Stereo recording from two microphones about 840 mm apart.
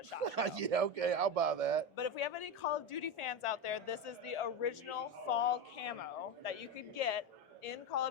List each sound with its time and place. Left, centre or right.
0.3 s a man's voice: right
2.0 s a woman's voice: left